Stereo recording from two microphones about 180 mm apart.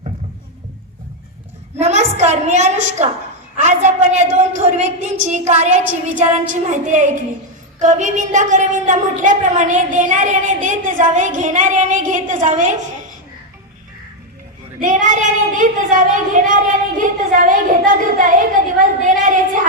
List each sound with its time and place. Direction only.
1.8 s a woman's voice: 40° right (ahead or behind)
14.8 s a woman's voice: 45° right (ahead or behind)
18.8 s a sound: 45° right (ahead or behind)